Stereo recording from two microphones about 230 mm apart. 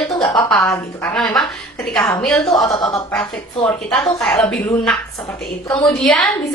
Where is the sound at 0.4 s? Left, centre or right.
Centre.